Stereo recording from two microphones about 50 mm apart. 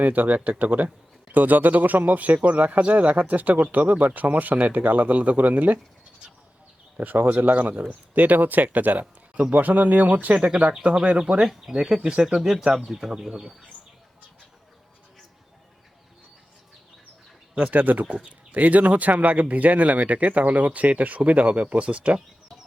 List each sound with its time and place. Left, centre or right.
0.0 s speech: right
7.0 s speech: right
11.4 s speech: centre
12.4 s speech: centre
17.5 s speech: right